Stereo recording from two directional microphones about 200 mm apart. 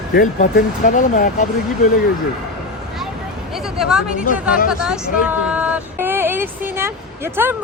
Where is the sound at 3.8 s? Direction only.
5° right (ahead or behind).